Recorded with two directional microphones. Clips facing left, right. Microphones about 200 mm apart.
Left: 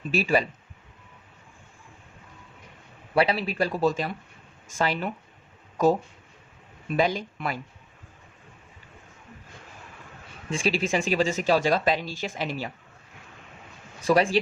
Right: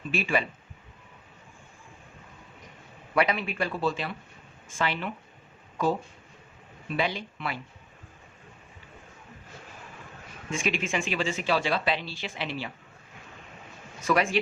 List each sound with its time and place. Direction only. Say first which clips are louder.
0.1 s speech: left 4 dB; 40° left (ahead or behind)
3.2 s speech: left 3 dB; 35° left (ahead or behind)
10.5 s speech: left 4 dB; 35° left (ahead or behind)
14.0 s speech: left 4 dB; 30° left (ahead or behind)